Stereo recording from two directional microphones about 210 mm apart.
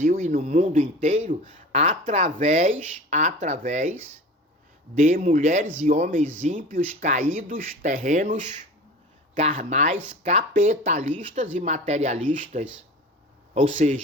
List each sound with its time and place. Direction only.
0.0 s a man's voice: 40° right (ahead or behind)
4.9 s a man's voice: 35° right (ahead or behind)